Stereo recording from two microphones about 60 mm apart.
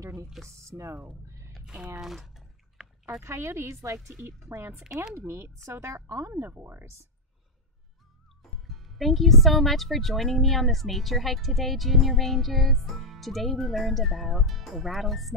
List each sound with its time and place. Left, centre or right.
0.6 s speech: right
2.0 s a sound: centre
3.2 s speech: right
6.4 s speech: right
8.4 s music: centre
9.4 s a woman's voice: centre